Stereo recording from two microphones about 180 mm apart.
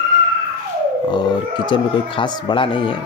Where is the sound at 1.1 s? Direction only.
25° left (ahead or behind).